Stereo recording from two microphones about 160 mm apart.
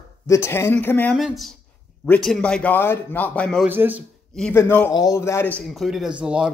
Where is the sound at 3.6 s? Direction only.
10° right (ahead or behind).